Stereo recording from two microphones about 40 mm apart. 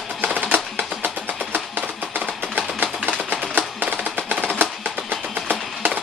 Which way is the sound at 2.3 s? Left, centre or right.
Right.